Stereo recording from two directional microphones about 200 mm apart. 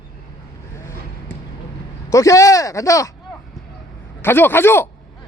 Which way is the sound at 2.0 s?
15° left (ahead or behind).